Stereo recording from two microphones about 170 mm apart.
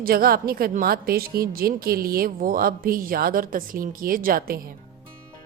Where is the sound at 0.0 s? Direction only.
60° right (ahead or behind).